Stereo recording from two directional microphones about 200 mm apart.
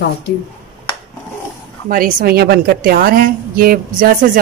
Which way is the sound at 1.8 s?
45° right (ahead or behind).